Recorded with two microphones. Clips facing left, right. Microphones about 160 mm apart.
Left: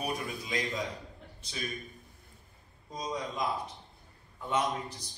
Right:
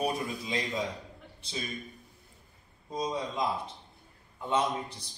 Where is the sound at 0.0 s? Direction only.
30° right (ahead or behind).